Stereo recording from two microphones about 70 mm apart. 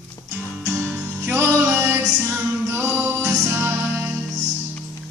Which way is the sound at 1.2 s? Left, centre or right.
Right.